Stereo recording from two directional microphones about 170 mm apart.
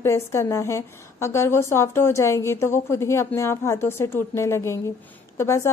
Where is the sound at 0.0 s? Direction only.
15° left (ahead or behind).